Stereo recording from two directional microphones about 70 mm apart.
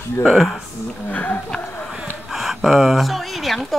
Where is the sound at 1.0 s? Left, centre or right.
Left.